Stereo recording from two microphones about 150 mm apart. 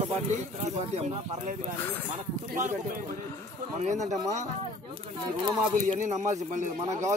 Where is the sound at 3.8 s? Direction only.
50° right (ahead or behind).